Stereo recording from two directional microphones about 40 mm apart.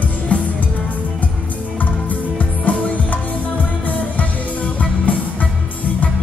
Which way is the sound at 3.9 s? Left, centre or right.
Left.